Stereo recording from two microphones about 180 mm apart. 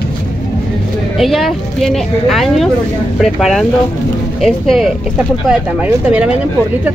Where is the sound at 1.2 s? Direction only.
Centre (ahead or behind).